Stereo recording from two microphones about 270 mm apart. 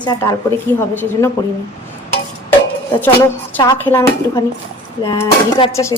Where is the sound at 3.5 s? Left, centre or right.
Centre.